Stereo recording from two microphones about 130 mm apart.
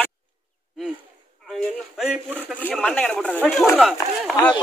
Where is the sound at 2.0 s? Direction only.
5° right (ahead or behind).